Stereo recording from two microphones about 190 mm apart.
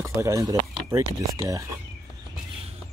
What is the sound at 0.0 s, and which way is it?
Speech, 15° right (ahead or behind).